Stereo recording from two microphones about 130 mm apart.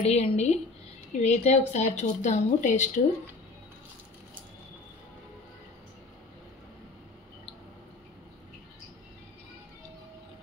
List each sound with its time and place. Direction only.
0.0 s a woman's voice: 55° left (ahead or behind); by 3.0 s 75° left (ahead or behind)